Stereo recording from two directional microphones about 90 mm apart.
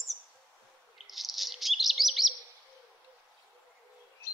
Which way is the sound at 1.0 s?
Centre (ahead or behind).